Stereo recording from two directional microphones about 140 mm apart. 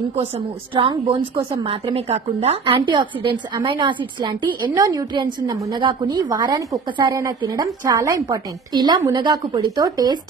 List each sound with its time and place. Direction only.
0.7 s a woman's voice: 40° right (ahead or behind)
2.6 s a woman's voice: 35° right (ahead or behind)